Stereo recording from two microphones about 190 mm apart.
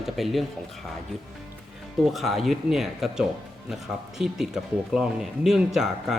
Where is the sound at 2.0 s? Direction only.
Centre (ahead or behind).